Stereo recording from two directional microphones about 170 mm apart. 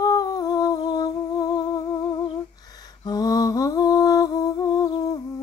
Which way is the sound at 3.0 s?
20° left (ahead or behind).